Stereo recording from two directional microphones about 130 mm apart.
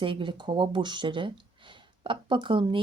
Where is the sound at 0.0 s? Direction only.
40° right (ahead or behind).